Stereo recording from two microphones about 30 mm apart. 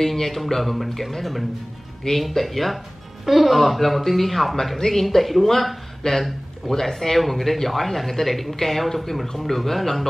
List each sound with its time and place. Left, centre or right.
0.0 s speech: centre
2.1 s speech: centre
6.0 s speech: left
6.7 s speech: centre